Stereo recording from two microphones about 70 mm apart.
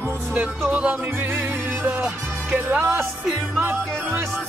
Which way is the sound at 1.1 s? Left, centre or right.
Right.